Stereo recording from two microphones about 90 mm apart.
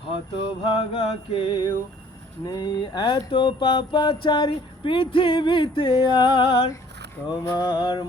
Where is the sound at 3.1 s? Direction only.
70° left (ahead or behind).